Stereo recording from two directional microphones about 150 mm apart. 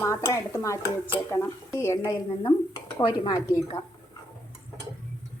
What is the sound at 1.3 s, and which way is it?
Dishes, 15° left (ahead or behind).